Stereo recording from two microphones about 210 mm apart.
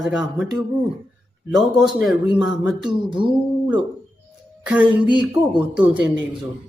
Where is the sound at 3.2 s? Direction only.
25° right (ahead or behind).